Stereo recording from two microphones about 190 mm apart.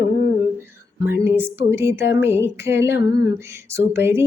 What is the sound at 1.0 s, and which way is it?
Lullaby, 10° right (ahead or behind).